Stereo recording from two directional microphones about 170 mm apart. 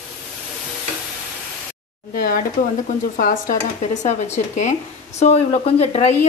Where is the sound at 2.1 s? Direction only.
55° left (ahead or behind).